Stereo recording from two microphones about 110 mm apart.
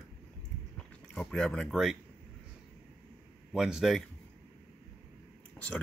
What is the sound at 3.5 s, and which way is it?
Speech, 5° right (ahead or behind).